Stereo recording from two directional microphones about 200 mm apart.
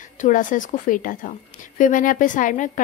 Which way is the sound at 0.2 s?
40° left (ahead or behind).